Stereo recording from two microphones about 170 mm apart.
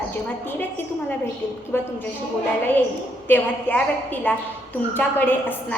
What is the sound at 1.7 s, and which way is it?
Speech, 10° left (ahead or behind).